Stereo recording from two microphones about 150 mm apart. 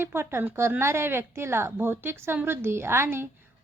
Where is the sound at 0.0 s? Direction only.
15° right (ahead or behind).